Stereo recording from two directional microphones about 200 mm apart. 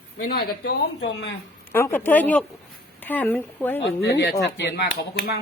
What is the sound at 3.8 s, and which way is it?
Speech, 60° left (ahead or behind).